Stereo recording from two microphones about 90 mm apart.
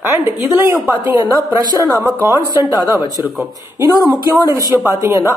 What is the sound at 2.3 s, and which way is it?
Speech, 45° left (ahead or behind).